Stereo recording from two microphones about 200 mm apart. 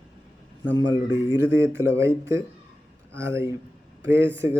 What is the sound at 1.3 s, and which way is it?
Speech, 10° right (ahead or behind).